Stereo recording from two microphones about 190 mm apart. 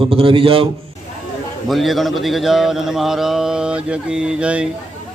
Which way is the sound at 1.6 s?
Centre (ahead or behind).